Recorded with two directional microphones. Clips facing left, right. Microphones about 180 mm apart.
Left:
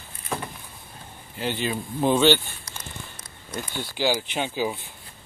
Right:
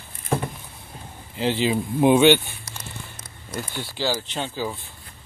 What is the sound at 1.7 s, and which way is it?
Speech, 15° right (ahead or behind).